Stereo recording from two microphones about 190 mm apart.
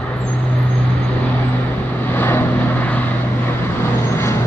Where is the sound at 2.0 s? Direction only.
10° left (ahead or behind).